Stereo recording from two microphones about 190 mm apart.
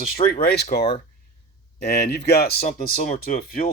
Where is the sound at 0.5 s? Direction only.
60° left (ahead or behind).